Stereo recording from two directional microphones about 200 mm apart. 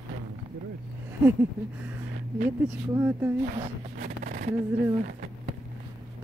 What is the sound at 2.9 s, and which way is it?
Speech, 10° right (ahead or behind).